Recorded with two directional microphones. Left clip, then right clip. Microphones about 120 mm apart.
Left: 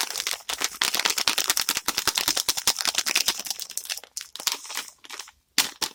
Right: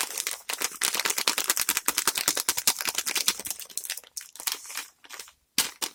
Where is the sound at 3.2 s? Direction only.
30° left (ahead or behind).